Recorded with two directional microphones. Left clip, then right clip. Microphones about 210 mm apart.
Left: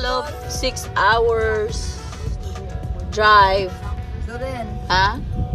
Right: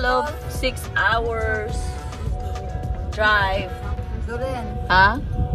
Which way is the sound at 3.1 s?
25° left (ahead or behind).